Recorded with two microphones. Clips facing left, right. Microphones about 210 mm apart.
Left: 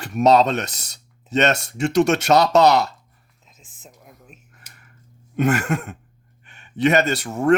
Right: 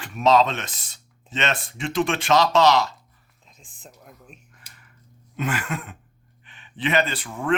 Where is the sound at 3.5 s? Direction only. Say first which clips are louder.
Even; 5° left (ahead or behind).